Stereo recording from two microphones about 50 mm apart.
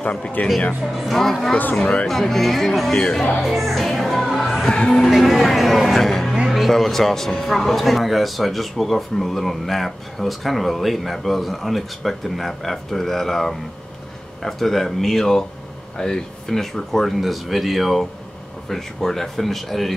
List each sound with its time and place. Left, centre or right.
0.0 s speech: centre
0.9 s speech: centre
2.9 s speech: centre
3.4 s music: centre
4.6 s speech: centre
5.0 s speech: centre